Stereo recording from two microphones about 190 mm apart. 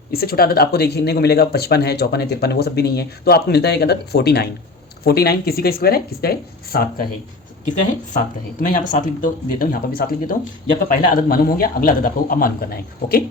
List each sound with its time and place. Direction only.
0.1 s a man's voice: 55° left (ahead or behind)
8.6 s a man's voice: 45° left (ahead or behind)